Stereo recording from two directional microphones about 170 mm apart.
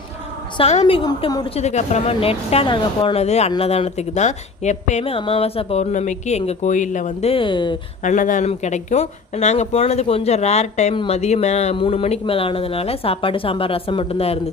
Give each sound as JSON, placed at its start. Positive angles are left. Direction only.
{"t": 0.5, "sound": "speech", "side_deg": 40}
{"t": 0.9, "sound": "a woman's voice", "side_deg": 25}
{"t": 1.5, "sound": "speech", "side_deg": 40}
{"t": 8.0, "sound": "speech", "side_deg": 50}